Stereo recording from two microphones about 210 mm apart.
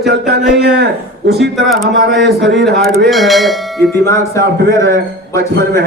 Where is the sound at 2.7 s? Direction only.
50° right (ahead or behind).